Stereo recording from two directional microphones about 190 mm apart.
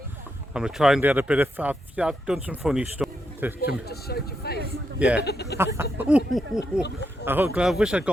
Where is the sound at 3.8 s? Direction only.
55° left (ahead or behind).